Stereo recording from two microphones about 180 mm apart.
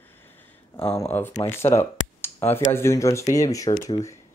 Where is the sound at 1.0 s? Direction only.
10° left (ahead or behind).